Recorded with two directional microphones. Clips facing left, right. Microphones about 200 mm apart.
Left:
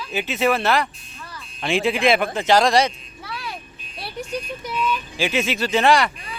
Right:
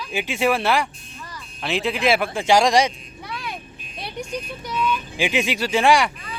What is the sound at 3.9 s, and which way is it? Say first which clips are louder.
Vehicle: even; 20° right (ahead or behind).